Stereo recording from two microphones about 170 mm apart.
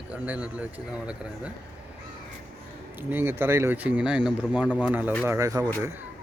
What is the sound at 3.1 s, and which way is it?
Speech, 10° right (ahead or behind).